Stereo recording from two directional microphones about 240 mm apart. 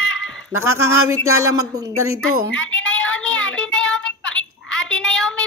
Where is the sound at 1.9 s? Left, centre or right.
Right.